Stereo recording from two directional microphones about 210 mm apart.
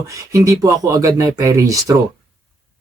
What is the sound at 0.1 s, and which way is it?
Speech, 15° right (ahead or behind).